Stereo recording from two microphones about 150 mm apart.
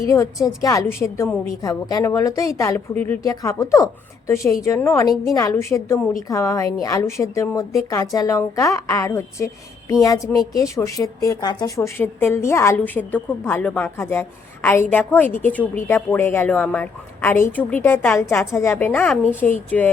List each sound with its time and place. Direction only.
0.0 s a woman's voice: 20° left (ahead or behind)